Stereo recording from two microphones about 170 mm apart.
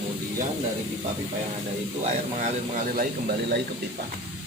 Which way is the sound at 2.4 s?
55° right (ahead or behind).